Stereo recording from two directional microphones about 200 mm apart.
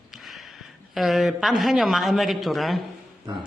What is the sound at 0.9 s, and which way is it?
A woman's voice, centre (ahead or behind).